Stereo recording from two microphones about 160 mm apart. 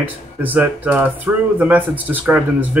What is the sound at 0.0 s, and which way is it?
Speech, 10° right (ahead or behind).